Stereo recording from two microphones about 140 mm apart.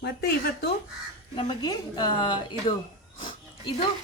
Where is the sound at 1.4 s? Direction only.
30° left (ahead or behind).